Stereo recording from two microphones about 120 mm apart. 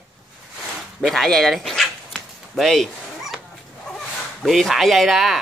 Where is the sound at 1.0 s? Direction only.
Centre (ahead or behind).